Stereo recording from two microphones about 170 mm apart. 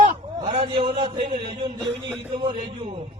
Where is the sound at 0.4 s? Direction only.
35° right (ahead or behind).